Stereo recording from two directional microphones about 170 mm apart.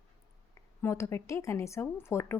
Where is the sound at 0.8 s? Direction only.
15° left (ahead or behind).